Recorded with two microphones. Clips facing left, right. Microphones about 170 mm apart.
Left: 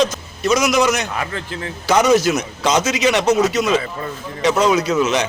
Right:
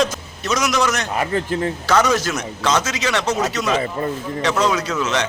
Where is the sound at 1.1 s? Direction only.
30° right (ahead or behind).